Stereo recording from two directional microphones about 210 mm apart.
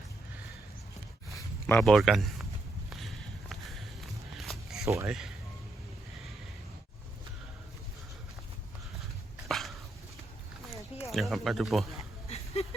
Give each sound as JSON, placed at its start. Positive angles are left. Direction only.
{"t": 1.4, "sound": "speech", "side_deg": 10}
{"t": 2.9, "sound": "walk", "side_deg": 0}
{"t": 4.9, "sound": "speech", "side_deg": -15}
{"t": 9.5, "sound": "dog", "side_deg": 0}
{"t": 10.7, "sound": "a sound", "side_deg": 15}
{"t": 11.1, "sound": "speech", "side_deg": 0}
{"t": 12.6, "sound": "a sound", "side_deg": 30}